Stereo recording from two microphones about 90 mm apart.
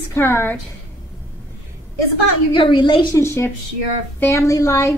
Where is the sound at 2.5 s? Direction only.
65° left (ahead or behind).